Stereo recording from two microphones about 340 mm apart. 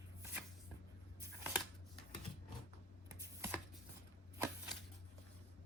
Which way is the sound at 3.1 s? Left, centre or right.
Centre.